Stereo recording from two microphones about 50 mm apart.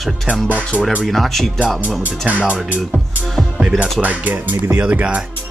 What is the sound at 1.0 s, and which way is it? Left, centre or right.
Speech, centre.